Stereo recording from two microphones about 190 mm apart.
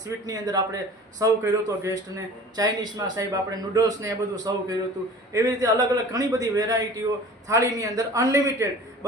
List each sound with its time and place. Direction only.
0.3 s a man's voice: 20° right (ahead or behind)